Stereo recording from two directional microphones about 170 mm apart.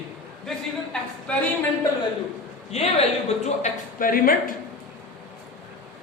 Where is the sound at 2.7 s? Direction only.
40° left (ahead or behind); by 4.6 s 55° left (ahead or behind).